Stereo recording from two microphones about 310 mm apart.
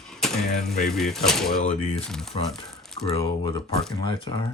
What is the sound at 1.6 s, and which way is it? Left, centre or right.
Speech, left.